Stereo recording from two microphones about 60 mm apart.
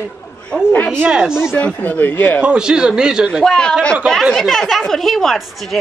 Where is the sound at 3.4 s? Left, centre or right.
Centre.